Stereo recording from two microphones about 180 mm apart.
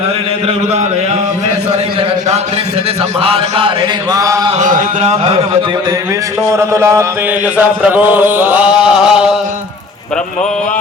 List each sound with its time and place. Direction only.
3.2 s mantra: 30° right (ahead or behind)
4.5 s a sound: 40° right (ahead or behind)
6.5 s chant: 15° right (ahead or behind)